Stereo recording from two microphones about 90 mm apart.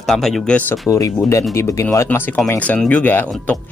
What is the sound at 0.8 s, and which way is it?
Speech, 35° left (ahead or behind).